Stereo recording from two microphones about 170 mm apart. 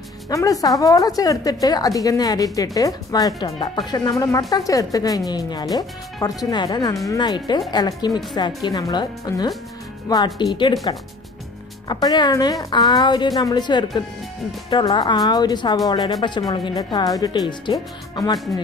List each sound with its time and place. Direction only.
0.3 s a woman's voice: 20° left (ahead or behind)